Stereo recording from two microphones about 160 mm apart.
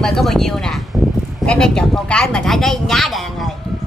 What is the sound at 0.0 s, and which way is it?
Speech, centre (ahead or behind).